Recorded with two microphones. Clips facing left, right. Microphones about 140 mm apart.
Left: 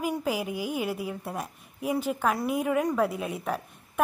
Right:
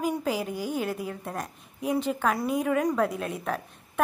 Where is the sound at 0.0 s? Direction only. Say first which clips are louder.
Right 1 dB; 5° left (ahead or behind).